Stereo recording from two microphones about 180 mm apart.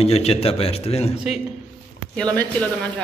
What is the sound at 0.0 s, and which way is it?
A man's voice, 35° left (ahead or behind).